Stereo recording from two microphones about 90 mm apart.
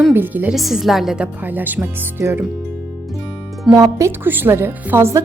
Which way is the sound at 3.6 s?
40° right (ahead or behind).